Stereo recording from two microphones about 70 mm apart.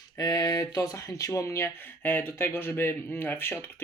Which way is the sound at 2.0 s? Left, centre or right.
Left.